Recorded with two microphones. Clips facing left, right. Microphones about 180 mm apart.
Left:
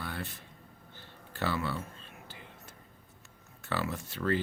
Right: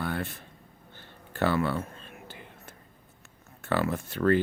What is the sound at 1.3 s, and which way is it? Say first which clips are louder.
Whispering: right 7 dB; 55° right (ahead or behind).